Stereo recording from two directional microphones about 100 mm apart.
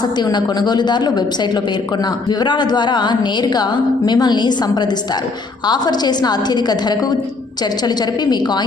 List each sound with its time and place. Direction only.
0.0 s a woman's voice: 45° left (ahead or behind)